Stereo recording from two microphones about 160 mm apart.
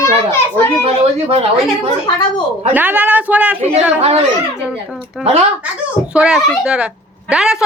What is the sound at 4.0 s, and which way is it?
Speech, 40° right (ahead or behind).